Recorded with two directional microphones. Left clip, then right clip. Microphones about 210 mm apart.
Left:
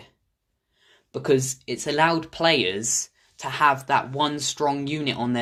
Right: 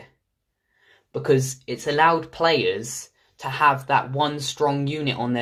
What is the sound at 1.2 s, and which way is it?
Speech, 35° left (ahead or behind).